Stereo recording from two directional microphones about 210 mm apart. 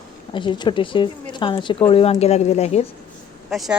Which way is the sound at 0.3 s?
20° left (ahead or behind).